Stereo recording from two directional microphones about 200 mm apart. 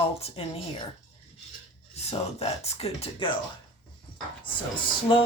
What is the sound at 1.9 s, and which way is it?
Speech, 30° left (ahead or behind).